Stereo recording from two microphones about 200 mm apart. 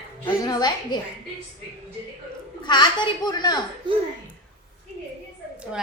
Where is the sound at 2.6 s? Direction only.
20° left (ahead or behind).